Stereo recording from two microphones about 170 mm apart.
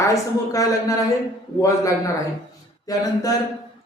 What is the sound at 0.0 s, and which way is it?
Music, 20° left (ahead or behind).